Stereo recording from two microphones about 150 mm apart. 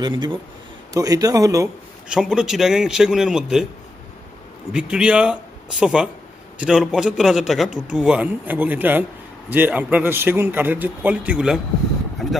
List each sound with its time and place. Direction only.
0.0 s a man's voice: 30° right (ahead or behind)
2.0 s a man's voice: 5° right (ahead or behind)
4.7 s a man's voice: 5° right (ahead or behind)